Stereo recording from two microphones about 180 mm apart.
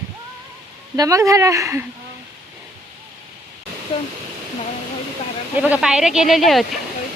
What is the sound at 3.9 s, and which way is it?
Speech, 30° left (ahead or behind).